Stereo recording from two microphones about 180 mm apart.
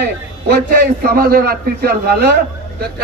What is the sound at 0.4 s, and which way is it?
A man's voice, 55° right (ahead or behind).